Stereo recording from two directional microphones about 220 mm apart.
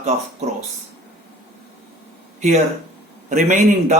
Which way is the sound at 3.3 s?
35° right (ahead or behind).